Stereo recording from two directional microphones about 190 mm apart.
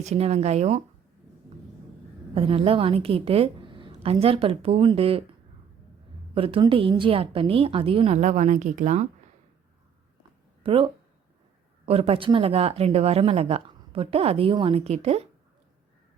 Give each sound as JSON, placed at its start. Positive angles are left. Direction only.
{"t": 0.0, "sound": "speech", "side_deg": -35}
{"t": 2.3, "sound": "a woman's voice", "side_deg": -30}
{"t": 6.3, "sound": "a woman's voice", "side_deg": -30}
{"t": 10.6, "sound": "speech", "side_deg": -30}